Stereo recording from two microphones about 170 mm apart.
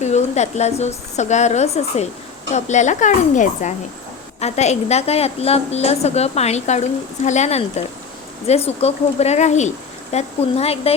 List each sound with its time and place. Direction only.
0.0 s a woman's voice: 40° left (ahead or behind)